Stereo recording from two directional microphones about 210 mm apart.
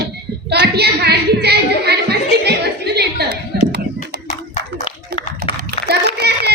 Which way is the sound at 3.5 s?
50° right (ahead or behind).